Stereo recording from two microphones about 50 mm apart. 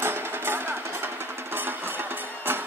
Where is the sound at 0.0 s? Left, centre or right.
Right.